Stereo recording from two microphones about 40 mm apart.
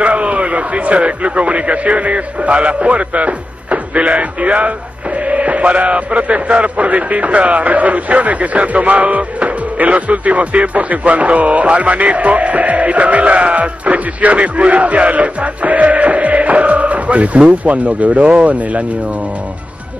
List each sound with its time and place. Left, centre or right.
0.0 s a man's voice: right